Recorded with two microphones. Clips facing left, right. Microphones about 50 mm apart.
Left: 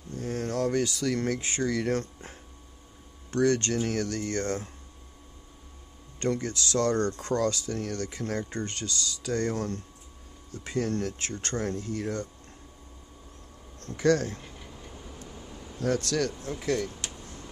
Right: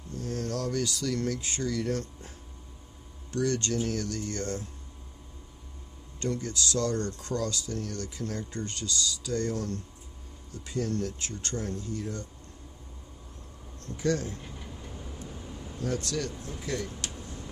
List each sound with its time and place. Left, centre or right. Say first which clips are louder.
0.1 s speech: left 2 dB; left
6.1 s speech: left 3 dB; left
13.7 s speech: left 5 dB; left
14.4 s a sound: right 2 dB; centre
15.4 s vehicle: right 2 dB; centre
15.8 s speech: left 5 dB; left